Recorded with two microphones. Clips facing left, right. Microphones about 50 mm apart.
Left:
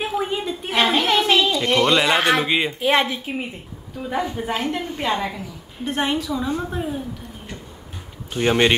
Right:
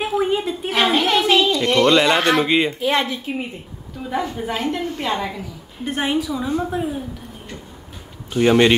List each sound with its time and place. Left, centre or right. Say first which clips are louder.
0.0 s a sound: right 4 dB; centre
2.8 s a woman's voice: left 1 dB; centre
3.3 s a woman's voice: right 2 dB; centre
4.8 s a woman's voice: even; centre
5.1 s a woman's voice: even; centre
8.3 s speech: right 4 dB; centre